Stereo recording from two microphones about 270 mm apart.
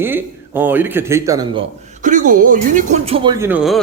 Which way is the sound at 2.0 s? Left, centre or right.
Right.